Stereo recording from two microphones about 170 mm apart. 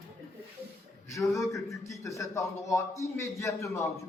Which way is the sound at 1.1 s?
20° left (ahead or behind).